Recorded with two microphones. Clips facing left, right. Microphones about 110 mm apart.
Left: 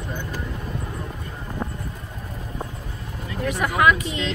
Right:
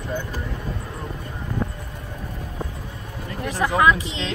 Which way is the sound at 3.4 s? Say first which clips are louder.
Right 1 dB; 30° right (ahead or behind).